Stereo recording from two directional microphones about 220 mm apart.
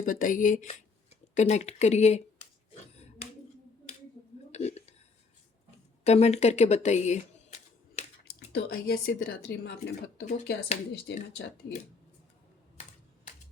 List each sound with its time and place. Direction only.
0.0 s speech: 40° left (ahead or behind)
2.9 s finger snapping: 30° left (ahead or behind)
4.5 s whispering: 30° left (ahead or behind)
6.1 s a sound: 30° left (ahead or behind)
8.5 s speech: 45° left (ahead or behind)
10.2 s speech: 35° left (ahead or behind)